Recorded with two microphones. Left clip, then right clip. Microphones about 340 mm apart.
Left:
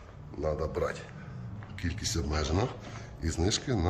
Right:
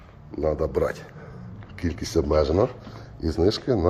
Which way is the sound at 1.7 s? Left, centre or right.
Centre.